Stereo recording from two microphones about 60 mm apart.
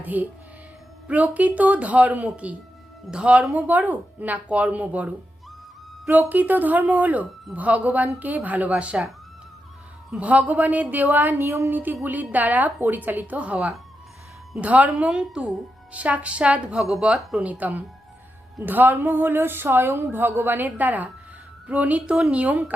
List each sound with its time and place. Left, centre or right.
0.0 s speech: right
10.1 s a woman's voice: right